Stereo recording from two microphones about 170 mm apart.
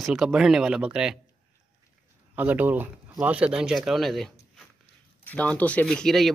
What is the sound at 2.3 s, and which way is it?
Speech, 10° right (ahead or behind).